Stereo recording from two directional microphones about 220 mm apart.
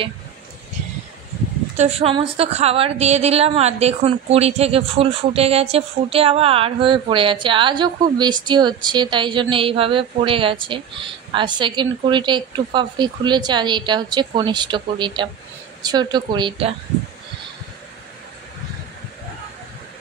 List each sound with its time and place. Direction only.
1.8 s a woman's voice: 25° right (ahead or behind)